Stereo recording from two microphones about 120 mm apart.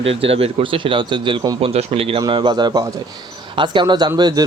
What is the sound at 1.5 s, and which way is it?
Speech, 55° right (ahead or behind).